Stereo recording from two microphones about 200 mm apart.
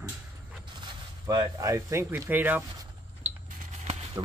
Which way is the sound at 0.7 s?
20° right (ahead or behind).